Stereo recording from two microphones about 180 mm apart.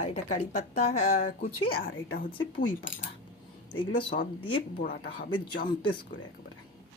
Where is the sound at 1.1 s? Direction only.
50° left (ahead or behind).